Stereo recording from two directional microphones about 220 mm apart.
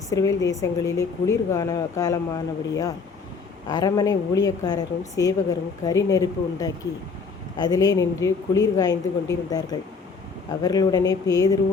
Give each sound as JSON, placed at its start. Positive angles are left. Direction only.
{"t": 0.1, "sound": "a woman's voice", "side_deg": 15}
{"t": 3.7, "sound": "a woman's voice", "side_deg": 15}